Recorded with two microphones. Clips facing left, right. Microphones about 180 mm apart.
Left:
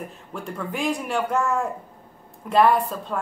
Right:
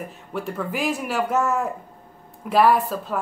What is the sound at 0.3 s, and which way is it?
A woman's voice, 5° right (ahead or behind).